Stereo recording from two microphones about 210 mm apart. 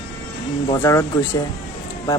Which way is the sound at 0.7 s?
15° left (ahead or behind).